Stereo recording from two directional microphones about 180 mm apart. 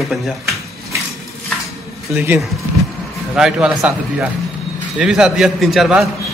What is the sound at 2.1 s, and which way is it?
A man's voice, 10° right (ahead or behind).